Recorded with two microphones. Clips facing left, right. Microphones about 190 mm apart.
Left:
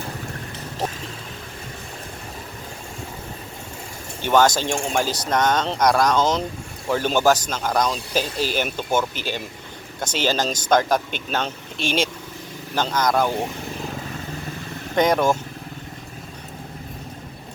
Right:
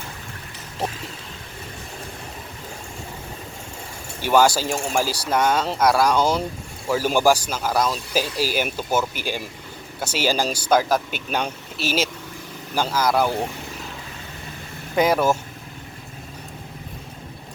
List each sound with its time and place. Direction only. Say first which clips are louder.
4.2 s speech: even; 10° right (ahead or behind)
14.9 s speech: even; 5° right (ahead or behind)